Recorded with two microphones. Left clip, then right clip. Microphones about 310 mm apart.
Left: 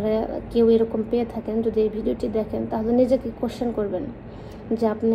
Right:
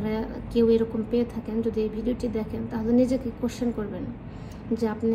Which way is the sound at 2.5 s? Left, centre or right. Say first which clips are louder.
Left 6 dB; left.